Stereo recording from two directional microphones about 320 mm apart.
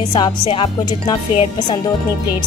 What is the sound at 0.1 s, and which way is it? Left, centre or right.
Speech, centre.